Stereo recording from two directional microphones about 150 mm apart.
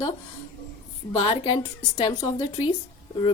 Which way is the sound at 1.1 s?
35° left (ahead or behind).